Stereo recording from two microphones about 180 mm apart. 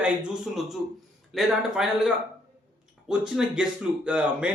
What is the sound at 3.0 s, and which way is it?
Speech, 5° right (ahead or behind).